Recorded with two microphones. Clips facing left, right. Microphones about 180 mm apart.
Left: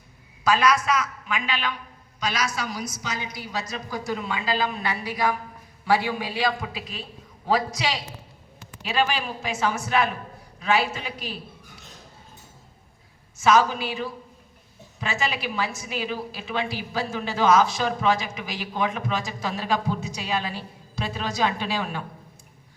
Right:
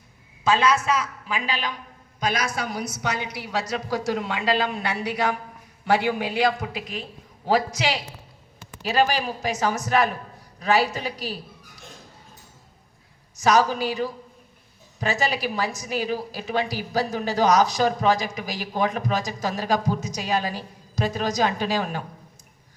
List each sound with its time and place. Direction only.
0.4 s a woman's voice: 25° right (ahead or behind)
2.2 s a woman's voice: 55° right (ahead or behind)
8.8 s a woman's voice: 40° right (ahead or behind)
13.4 s a woman's voice: 40° right (ahead or behind)